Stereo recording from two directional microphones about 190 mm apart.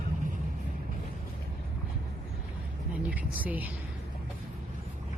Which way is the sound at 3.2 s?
10° right (ahead or behind).